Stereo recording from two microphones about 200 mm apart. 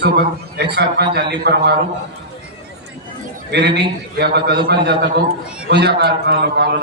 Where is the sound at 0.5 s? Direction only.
55° right (ahead or behind).